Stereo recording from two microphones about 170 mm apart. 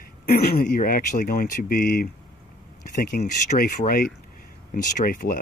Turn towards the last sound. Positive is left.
turn(degrees=55)  # may be behind; listen again after turning